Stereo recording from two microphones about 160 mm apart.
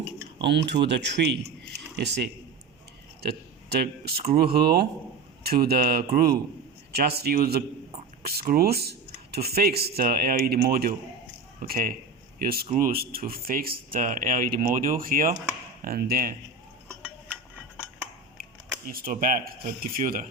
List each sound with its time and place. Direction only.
0.4 s speech: 90° right
3.7 s speech: 80° right
12.6 s speech: 55° right (ahead or behind)
18.9 s speech: 65° right (ahead or behind)